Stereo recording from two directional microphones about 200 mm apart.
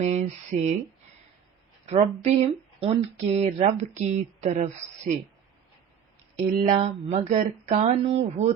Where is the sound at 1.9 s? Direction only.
35° right (ahead or behind).